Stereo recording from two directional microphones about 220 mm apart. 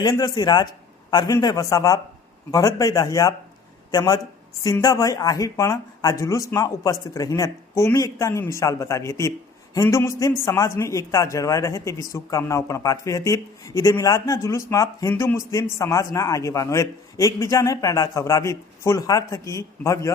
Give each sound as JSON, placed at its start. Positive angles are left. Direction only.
{"t": 0.0, "sound": "speech", "side_deg": 20}